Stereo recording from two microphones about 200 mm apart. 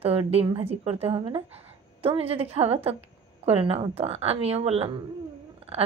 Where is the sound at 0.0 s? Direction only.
30° right (ahead or behind).